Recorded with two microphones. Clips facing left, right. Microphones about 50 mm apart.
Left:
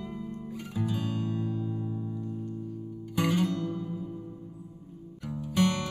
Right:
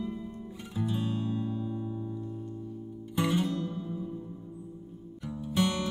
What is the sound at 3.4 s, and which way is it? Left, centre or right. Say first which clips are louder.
Music: left 2 dB; left.